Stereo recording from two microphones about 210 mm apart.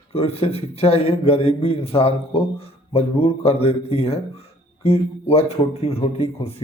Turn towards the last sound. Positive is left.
turn(degrees=30)  # may be behind; listen again after turning